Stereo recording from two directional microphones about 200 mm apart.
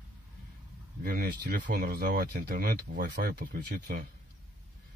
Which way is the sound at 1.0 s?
50° right (ahead or behind).